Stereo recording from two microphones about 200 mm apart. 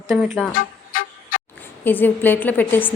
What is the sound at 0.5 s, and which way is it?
Vehicle, 45° left (ahead or behind).